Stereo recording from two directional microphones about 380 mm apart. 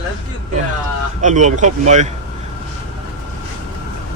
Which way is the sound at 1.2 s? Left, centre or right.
Centre.